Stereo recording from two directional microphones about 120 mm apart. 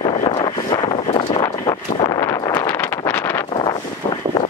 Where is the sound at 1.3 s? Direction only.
35° left (ahead or behind).